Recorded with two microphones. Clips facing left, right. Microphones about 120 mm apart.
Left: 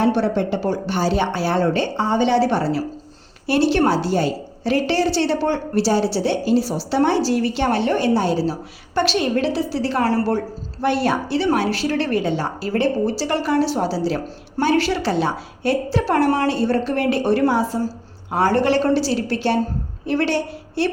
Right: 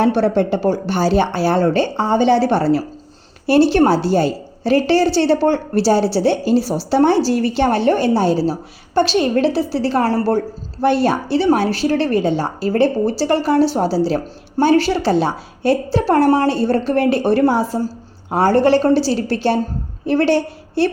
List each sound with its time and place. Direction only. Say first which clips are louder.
0.2 s a woman's voice: right 4 dB; 45° right (ahead or behind)